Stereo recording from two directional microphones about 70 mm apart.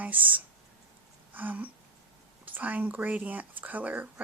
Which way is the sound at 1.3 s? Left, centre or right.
Right.